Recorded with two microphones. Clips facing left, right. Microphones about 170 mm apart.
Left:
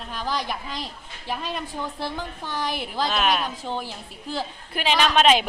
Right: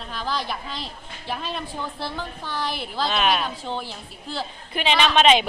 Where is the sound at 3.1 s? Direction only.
Centre (ahead or behind).